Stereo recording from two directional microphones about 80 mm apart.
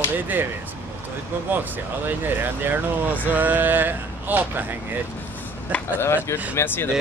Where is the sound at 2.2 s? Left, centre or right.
Right.